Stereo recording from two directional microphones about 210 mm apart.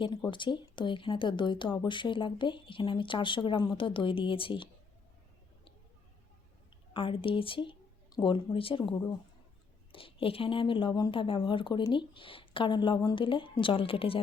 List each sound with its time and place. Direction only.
0.3 s speech: 20° left (ahead or behind)
6.9 s speech: 25° left (ahead or behind)